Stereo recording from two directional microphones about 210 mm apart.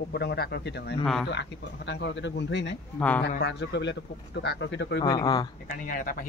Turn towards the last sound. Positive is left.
turn(degrees=40)  # may be behind; listen again after turning